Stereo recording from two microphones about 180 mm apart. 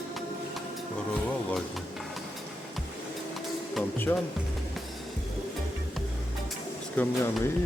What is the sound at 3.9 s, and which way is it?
Speech, 10° left (ahead or behind).